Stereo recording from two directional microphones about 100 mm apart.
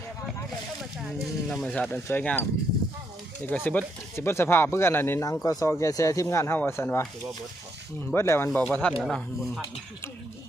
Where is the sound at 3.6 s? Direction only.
25° left (ahead or behind).